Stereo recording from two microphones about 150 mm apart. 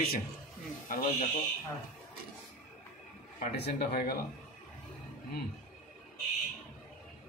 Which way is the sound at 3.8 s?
90° left.